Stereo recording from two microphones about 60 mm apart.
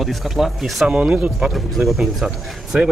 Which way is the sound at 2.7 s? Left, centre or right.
Right.